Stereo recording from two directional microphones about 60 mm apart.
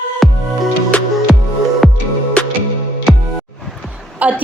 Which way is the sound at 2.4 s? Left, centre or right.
Centre.